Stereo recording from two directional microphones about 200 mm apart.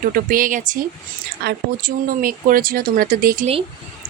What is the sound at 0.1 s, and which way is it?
Speech, 45° right (ahead or behind).